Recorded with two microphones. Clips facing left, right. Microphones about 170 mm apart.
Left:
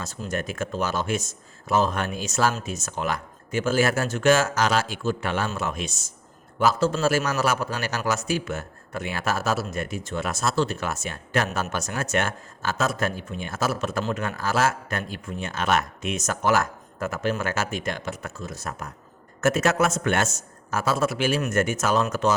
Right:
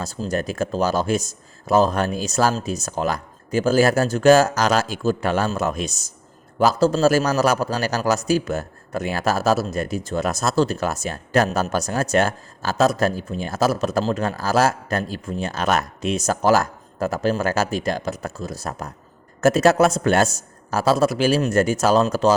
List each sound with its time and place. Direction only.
0.0 s a man's voice: 35° right (ahead or behind)